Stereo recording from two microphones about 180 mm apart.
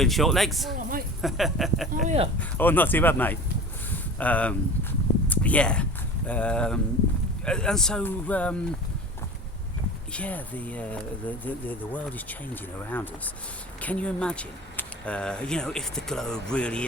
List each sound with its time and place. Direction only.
0.0 s speech: centre (ahead or behind)
2.0 s speech: 35° right (ahead or behind)
2.4 s speech: 10° left (ahead or behind)
3.9 s a sound: 10° left (ahead or behind)
6.2 s speech: 5° left (ahead or behind)
10.1 s speech: 5° left (ahead or behind)